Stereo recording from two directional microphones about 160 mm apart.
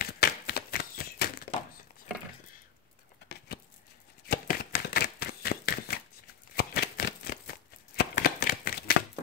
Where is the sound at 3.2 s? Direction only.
90° left.